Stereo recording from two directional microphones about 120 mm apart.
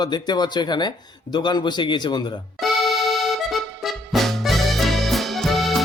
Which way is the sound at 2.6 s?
Centre (ahead or behind).